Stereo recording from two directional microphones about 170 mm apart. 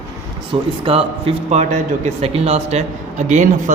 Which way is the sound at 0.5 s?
30° right (ahead or behind).